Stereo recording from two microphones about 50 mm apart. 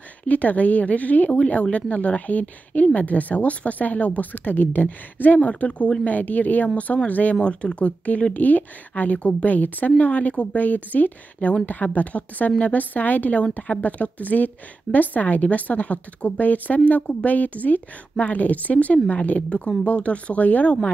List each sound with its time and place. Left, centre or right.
0.2 s speech: left